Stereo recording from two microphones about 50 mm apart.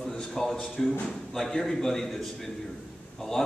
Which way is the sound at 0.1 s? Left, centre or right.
Centre.